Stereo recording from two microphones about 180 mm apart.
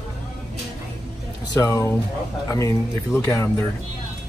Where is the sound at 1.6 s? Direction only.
15° left (ahead or behind).